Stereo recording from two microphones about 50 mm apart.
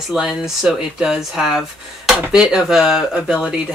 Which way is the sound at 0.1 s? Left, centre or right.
Centre.